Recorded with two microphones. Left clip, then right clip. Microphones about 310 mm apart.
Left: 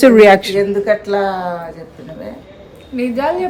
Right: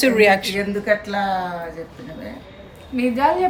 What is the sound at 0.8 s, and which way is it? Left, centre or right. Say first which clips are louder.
Speech: left 5 dB; centre.